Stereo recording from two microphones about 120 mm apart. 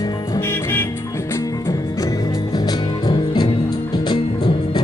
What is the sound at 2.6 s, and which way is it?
Music, 35° left (ahead or behind).